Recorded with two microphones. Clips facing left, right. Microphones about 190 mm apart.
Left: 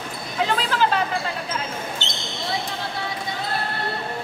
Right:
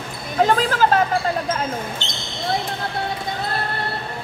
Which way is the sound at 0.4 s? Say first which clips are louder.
Right 5 dB; 45° right (ahead or behind).